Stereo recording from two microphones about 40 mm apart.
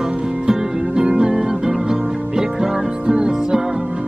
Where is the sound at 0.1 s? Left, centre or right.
Right.